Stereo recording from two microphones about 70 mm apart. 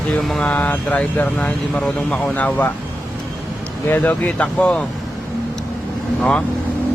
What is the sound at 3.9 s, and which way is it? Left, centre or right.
Speech, left.